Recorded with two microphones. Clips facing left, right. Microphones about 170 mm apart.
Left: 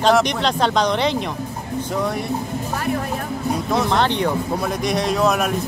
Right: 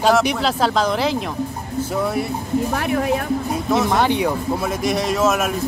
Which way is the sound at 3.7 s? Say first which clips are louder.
Right 2 dB; 5° right (ahead or behind).